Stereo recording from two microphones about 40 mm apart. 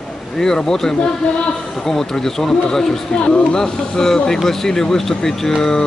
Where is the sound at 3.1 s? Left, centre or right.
Left.